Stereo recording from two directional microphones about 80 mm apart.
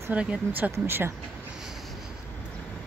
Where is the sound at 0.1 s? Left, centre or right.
Centre.